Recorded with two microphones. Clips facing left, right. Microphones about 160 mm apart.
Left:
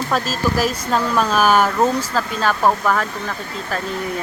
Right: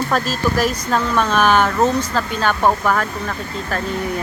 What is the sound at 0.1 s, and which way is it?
Speech, centre (ahead or behind).